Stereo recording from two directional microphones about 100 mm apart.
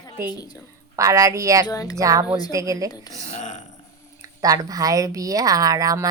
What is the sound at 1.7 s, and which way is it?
Speech, 35° left (ahead or behind).